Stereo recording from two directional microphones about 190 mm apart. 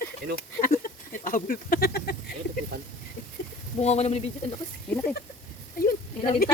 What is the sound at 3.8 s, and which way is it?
Speech, 35° left (ahead or behind).